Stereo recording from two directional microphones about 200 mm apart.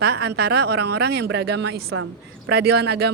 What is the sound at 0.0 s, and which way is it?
Speech, 55° right (ahead or behind).